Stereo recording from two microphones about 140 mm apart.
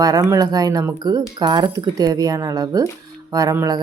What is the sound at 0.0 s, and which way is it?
Speech, 25° right (ahead or behind).